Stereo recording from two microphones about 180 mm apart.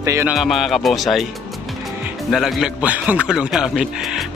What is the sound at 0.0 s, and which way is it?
Speech, 15° right (ahead or behind).